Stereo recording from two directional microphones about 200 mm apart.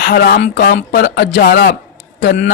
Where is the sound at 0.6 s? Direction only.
50° left (ahead or behind).